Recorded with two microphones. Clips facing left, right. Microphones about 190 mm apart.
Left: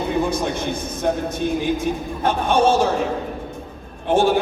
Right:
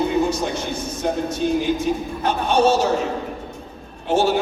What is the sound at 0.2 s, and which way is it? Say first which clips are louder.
A man's voice: even; 55° left (ahead or behind).